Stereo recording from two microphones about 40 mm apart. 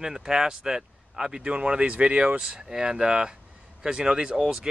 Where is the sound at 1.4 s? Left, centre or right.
Right.